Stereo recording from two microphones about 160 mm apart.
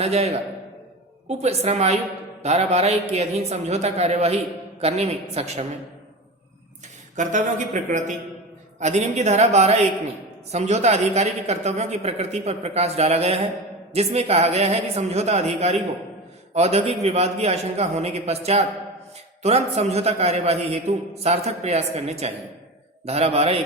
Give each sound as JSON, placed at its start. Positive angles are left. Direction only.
{"t": 0.0, "sound": "a man's voice", "side_deg": -40}
{"t": 7.2, "sound": "a man's voice", "side_deg": -50}